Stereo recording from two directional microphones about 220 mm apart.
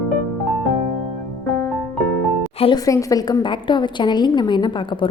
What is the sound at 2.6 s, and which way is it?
A woman's voice, 20° left (ahead or behind).